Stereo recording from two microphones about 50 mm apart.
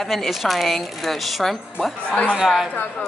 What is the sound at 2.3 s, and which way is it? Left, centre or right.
Speech, centre.